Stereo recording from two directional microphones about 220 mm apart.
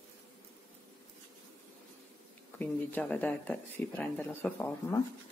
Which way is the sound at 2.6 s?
5° left (ahead or behind).